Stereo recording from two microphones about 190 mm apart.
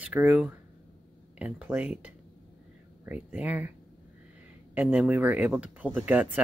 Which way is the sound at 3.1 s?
10° right (ahead or behind).